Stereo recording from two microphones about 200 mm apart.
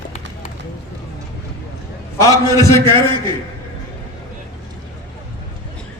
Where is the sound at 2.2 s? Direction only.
15° left (ahead or behind).